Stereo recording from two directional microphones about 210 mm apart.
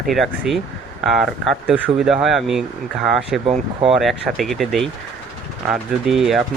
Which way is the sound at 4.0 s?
Centre (ahead or behind).